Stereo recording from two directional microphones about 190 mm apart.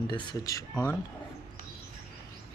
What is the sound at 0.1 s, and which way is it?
Speech, 25° left (ahead or behind).